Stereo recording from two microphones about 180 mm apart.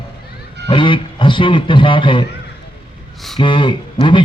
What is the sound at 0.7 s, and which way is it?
A man's voice, 30° left (ahead or behind).